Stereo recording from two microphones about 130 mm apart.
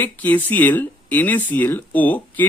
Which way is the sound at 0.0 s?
15° left (ahead or behind).